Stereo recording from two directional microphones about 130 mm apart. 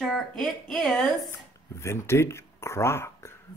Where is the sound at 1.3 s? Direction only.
20° left (ahead or behind).